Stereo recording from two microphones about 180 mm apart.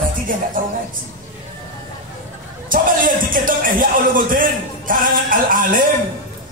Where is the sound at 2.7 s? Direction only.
50° right (ahead or behind).